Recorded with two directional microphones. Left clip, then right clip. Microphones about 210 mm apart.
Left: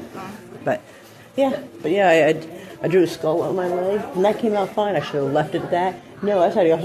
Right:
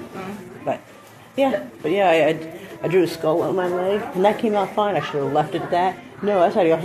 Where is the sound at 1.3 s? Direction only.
10° left (ahead or behind).